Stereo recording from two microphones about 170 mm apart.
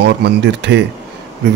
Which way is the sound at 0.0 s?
85° right.